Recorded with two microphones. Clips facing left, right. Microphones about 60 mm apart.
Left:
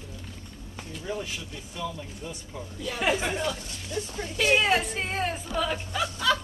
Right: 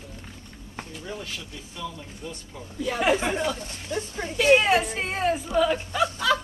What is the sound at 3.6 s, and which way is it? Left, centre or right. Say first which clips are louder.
Speech: right 3 dB; right.